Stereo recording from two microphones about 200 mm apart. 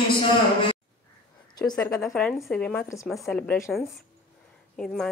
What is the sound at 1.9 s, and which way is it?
Speech, centre (ahead or behind).